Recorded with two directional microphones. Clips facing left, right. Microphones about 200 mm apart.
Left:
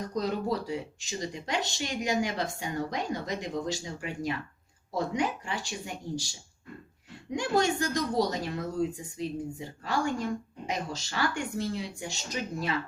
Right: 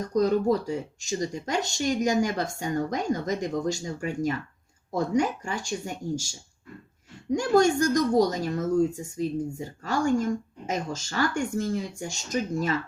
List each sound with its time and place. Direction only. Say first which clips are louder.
0.0 s speech: right 8 dB; 45° right (ahead or behind)